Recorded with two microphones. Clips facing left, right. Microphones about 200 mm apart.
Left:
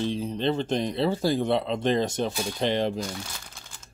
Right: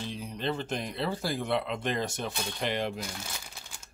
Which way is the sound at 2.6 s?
30° left (ahead or behind).